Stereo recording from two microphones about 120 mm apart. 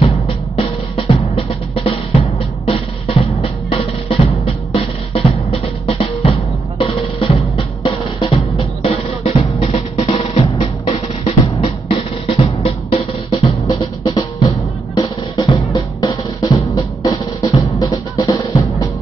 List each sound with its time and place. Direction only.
0.0 s drum: 55° left (ahead or behind)
13.7 s drum: 35° left (ahead or behind)